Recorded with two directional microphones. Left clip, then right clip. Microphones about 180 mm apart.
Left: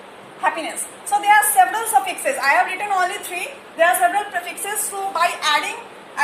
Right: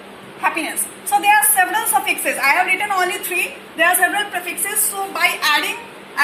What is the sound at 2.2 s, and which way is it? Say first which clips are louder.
Speech: right 2 dB; 30° left (ahead or behind).